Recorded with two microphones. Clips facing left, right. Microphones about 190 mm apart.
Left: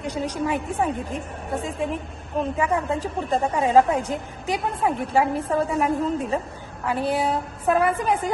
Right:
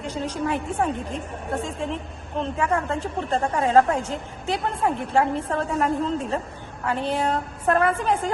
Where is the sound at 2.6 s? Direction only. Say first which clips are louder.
Right 1 dB; 10° left (ahead or behind).